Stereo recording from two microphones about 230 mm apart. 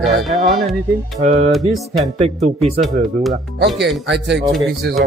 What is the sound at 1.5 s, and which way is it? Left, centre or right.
Speech, centre.